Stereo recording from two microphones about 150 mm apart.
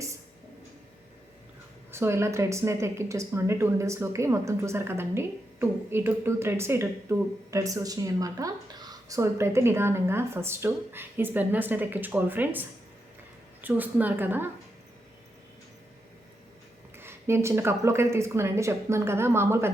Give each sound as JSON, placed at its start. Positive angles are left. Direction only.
{"t": 1.9, "sound": "a woman's voice", "side_deg": -15}
{"t": 17.0, "sound": "a woman's voice", "side_deg": -15}